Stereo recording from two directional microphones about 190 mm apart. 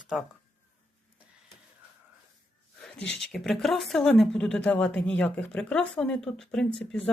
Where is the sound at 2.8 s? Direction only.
5° left (ahead or behind).